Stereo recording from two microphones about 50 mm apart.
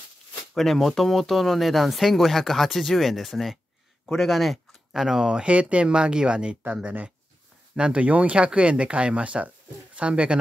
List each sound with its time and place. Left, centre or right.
0.6 s speech: centre
6.8 s speech: right